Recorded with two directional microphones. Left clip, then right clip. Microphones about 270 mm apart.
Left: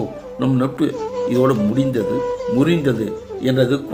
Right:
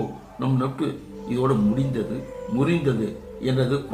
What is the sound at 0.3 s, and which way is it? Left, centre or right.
Speech, left.